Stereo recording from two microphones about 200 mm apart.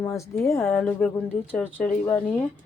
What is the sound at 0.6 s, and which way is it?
A woman's voice, centre (ahead or behind).